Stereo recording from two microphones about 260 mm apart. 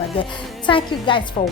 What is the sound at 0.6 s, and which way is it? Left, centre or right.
Speech, centre.